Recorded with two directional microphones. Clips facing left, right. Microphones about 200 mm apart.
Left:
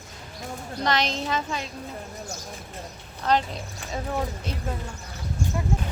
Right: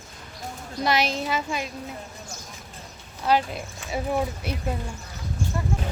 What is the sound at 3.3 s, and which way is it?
Speech, 10° right (ahead or behind).